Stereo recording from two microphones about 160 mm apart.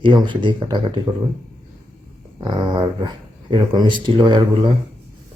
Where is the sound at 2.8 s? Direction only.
30° right (ahead or behind).